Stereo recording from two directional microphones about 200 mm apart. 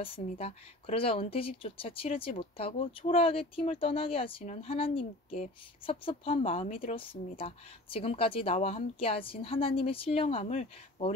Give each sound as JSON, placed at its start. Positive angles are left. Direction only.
{"t": 0.0, "sound": "speech", "side_deg": 30}